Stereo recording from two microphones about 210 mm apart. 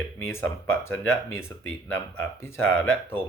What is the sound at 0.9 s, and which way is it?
Speech, 75° left (ahead or behind).